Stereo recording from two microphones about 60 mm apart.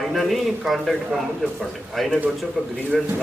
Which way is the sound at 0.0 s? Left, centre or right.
Centre.